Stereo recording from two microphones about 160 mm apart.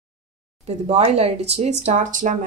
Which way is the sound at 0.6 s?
45° right (ahead or behind).